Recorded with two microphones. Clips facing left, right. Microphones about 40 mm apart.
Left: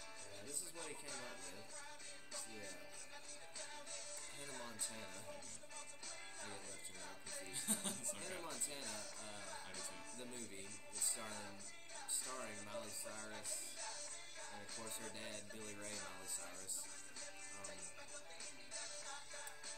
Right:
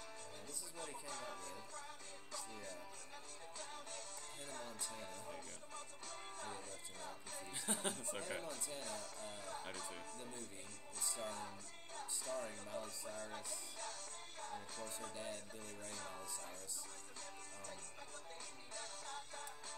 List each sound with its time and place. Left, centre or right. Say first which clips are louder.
1.1 s music: right 3 dB; centre
3.5 s music: right 2 dB; right
4.9 s speech: right 3 dB; centre
6.5 s music: right 3 dB; right
7.6 s speech: right 5 dB; right
8.8 s music: right 3 dB; right
11.2 s speech: right 4 dB; right
12.4 s speech: right 1 dB; centre
13.1 s music: right 3 dB; right
18.8 s music: right 4 dB; right